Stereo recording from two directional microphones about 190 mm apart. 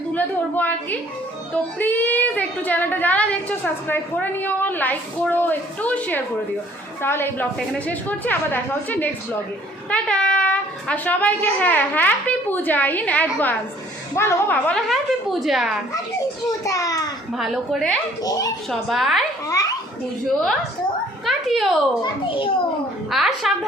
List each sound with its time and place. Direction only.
0.1 s a woman's voice: 10° left (ahead or behind)
16.6 s a woman's voice: 15° left (ahead or behind)
17.3 s a woman's voice: centre (ahead or behind)
18.2 s a child's voice: 20° left (ahead or behind)
18.7 s a woman's voice: centre (ahead or behind)
19.5 s a sound: 20° left (ahead or behind)
21.2 s a child's voice: centre (ahead or behind)
22.0 s a child's voice: 25° left (ahead or behind)
23.0 s a woman's voice: centre (ahead or behind)